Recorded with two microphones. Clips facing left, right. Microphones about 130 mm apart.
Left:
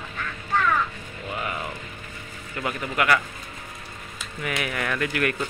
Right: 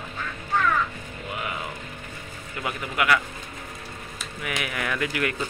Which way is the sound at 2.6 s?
10° right (ahead or behind).